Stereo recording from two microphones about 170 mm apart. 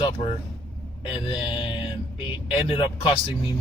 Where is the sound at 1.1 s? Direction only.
30° left (ahead or behind).